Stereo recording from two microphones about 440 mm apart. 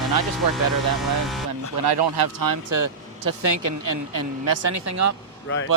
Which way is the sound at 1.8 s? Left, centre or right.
Right.